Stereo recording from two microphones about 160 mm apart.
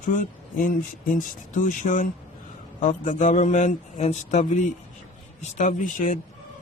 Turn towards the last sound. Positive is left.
turn(degrees=55)  # may be behind; listen again after turning